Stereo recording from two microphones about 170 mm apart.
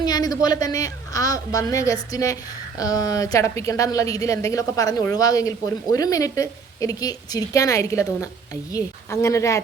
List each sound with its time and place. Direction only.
0.0 s a woman's voice: 25° left (ahead or behind)